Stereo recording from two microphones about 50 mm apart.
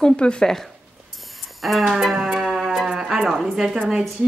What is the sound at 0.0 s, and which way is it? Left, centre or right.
Speech, centre.